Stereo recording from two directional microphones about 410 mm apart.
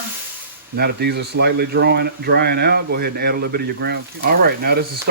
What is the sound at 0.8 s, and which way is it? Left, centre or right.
Speech, right.